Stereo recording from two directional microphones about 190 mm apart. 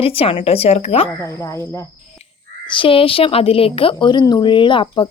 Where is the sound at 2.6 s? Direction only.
25° left (ahead or behind).